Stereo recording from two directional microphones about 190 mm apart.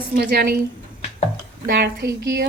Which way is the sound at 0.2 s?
55° right (ahead or behind).